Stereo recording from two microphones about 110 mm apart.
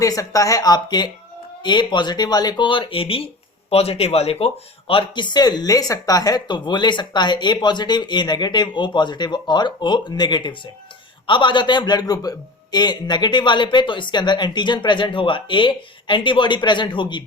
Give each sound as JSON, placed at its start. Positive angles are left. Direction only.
{"t": 0.0, "sound": "speech", "side_deg": 30}